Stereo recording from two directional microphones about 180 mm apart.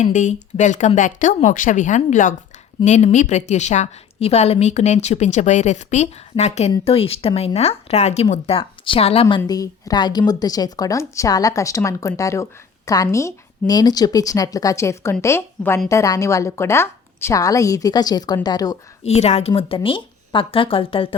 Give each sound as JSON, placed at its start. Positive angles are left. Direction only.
{"t": 0.0, "sound": "a woman's voice", "side_deg": 40}
{"t": 9.2, "sound": "a woman's voice", "side_deg": 20}
{"t": 19.0, "sound": "a woman's voice", "side_deg": 35}